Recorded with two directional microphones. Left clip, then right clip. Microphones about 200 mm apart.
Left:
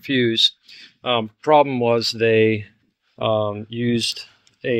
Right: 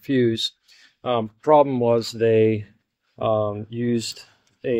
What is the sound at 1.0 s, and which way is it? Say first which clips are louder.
Speech: left 1 dB; 10° left (ahead or behind).